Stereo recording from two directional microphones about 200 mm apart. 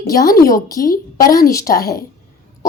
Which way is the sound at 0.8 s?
45° left (ahead or behind).